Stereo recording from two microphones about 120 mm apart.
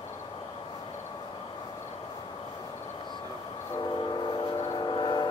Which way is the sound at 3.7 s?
35° left (ahead or behind).